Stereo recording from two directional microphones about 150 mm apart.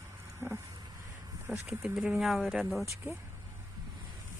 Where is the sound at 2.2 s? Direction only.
Centre (ahead or behind).